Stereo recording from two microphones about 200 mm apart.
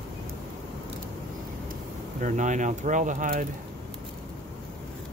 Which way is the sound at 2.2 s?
40° right (ahead or behind).